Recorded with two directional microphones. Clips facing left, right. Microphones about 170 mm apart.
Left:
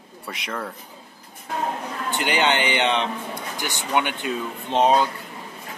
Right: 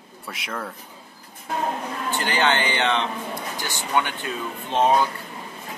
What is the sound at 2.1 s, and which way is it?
Speech, 15° left (ahead or behind).